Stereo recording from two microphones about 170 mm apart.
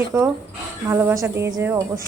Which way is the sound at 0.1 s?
20° right (ahead or behind).